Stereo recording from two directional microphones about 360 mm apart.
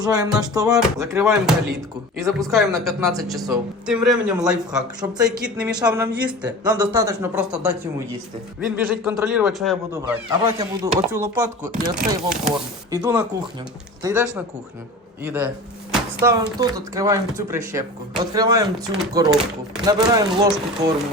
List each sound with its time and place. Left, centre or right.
0.0 s speech: centre